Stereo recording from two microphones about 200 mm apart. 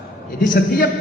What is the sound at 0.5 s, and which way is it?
Speech, 45° left (ahead or behind).